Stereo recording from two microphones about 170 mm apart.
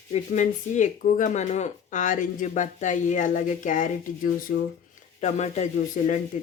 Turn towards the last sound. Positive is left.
turn(degrees=45)  # may be behind; listen again after turning